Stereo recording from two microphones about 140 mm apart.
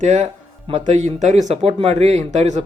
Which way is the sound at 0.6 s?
45° right (ahead or behind).